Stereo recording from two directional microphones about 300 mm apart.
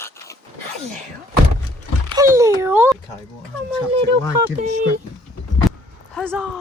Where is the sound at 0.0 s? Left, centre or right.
Centre.